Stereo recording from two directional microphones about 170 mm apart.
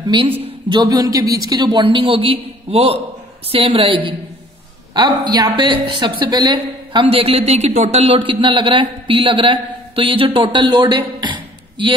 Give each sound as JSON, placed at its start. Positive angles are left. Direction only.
{"t": 0.4, "sound": "speech", "side_deg": -30}